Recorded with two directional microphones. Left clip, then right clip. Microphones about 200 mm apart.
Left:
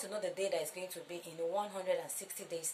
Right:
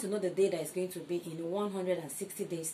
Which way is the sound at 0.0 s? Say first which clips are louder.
Right 7 dB; 25° left (ahead or behind).